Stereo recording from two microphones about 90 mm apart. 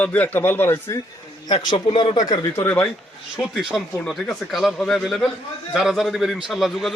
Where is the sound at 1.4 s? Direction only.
55° left (ahead or behind).